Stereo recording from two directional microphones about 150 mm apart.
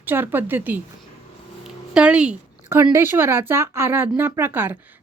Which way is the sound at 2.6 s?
15° right (ahead or behind).